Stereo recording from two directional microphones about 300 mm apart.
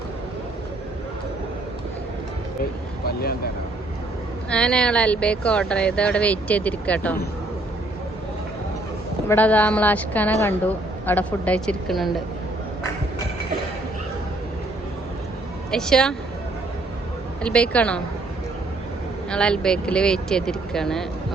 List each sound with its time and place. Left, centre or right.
3.1 s speech: left
4.4 s speech: centre
9.3 s speech: centre
15.7 s speech: centre
17.4 s speech: centre
19.3 s speech: centre